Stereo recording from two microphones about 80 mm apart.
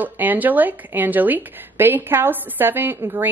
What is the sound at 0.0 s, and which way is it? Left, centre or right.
A woman's voice, right.